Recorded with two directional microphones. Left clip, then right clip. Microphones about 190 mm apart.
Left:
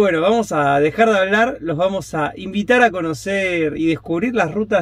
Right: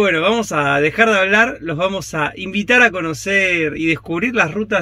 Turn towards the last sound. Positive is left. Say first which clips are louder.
# right 1 dB
turn(degrees=0)  # may be behind; listen again after turning